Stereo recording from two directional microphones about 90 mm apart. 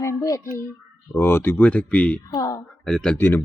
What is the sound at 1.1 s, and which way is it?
Speech, 25° left (ahead or behind).